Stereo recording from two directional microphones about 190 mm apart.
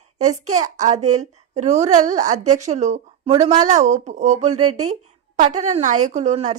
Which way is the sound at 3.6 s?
40° right (ahead or behind).